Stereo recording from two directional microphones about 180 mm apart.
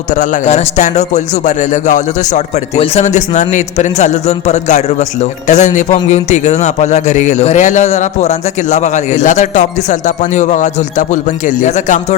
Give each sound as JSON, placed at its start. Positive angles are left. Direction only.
{"t": 0.1, "sound": "a man's voice", "side_deg": 45}